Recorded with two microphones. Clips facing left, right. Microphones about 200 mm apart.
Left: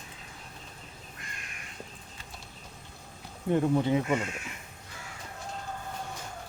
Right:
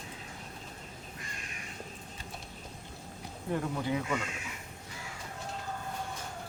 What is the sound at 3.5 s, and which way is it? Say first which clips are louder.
Speech: left 7 dB; 25° left (ahead or behind).